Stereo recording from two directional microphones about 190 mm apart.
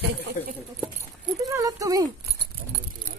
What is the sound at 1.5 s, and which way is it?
Speech, 15° right (ahead or behind).